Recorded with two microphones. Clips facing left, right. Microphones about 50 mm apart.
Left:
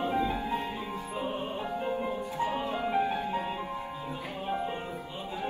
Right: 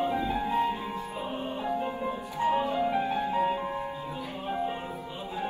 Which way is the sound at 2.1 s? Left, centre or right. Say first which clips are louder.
Right 3 dB; right.